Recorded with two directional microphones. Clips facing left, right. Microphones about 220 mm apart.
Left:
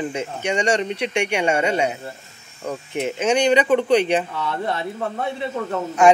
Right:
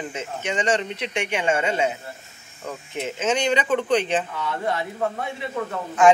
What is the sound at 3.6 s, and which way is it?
Speech, 15° left (ahead or behind).